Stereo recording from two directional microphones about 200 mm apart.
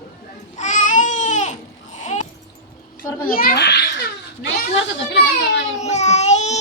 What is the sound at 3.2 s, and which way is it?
Speech, 45° left (ahead or behind).